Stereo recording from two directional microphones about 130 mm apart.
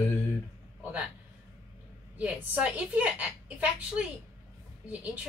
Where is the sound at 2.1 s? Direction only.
10° right (ahead or behind).